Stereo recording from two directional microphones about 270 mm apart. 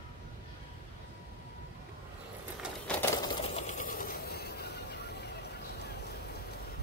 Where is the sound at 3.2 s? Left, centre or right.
Left.